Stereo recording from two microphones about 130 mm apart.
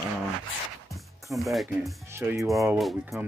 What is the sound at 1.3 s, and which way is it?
Speech, centre (ahead or behind).